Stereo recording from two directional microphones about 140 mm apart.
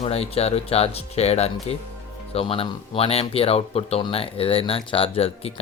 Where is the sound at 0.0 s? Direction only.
45° left (ahead or behind).